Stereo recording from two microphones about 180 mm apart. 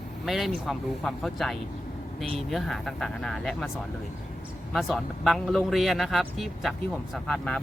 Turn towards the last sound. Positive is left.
turn(degrees=5)  # may be behind; listen again after turning